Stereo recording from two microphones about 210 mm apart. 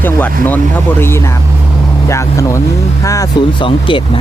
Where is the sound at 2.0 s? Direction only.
15° left (ahead or behind).